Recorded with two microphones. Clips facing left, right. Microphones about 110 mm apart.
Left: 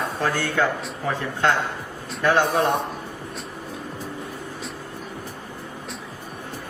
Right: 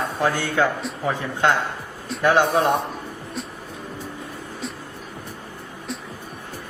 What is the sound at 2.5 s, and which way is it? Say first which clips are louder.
Speech: right 2 dB; centre (ahead or behind).